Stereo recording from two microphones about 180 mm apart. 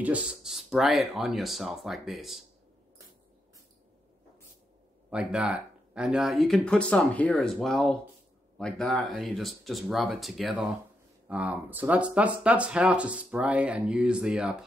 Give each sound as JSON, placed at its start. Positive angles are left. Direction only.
{"t": 0.0, "sound": "speech", "side_deg": -5}
{"t": 5.1, "sound": "speech", "side_deg": -5}